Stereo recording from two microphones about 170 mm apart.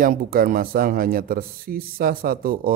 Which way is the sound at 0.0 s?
60° right (ahead or behind).